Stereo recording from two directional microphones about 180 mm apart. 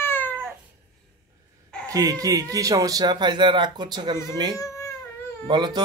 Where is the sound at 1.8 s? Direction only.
20° right (ahead or behind).